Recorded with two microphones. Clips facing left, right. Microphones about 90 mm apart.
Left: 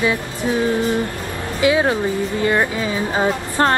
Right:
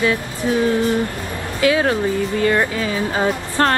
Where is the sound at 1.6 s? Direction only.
20° left (ahead or behind).